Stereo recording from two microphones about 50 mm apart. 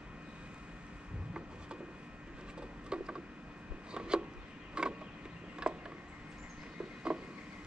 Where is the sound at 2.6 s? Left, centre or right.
Centre.